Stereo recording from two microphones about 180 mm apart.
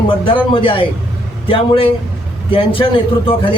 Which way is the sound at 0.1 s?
30° left (ahead or behind).